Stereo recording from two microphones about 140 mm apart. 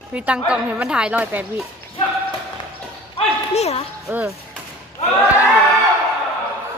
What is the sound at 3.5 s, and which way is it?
Speech, 50° left (ahead or behind).